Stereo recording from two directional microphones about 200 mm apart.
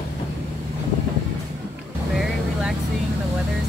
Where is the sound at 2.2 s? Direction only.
Centre (ahead or behind).